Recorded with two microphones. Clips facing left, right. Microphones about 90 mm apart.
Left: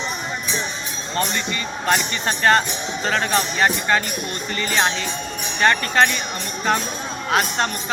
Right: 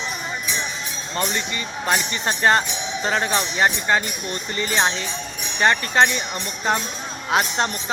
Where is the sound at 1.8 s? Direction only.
5° right (ahead or behind).